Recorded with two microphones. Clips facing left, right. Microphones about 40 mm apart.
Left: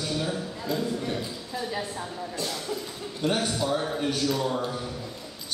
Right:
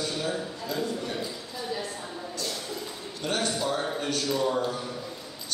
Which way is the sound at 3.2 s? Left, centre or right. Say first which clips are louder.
Left 2 dB; centre.